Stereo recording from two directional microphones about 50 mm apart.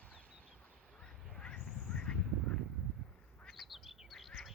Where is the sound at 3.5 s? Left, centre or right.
Centre.